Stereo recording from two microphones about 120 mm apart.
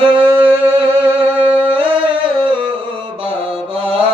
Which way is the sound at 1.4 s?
10° right (ahead or behind).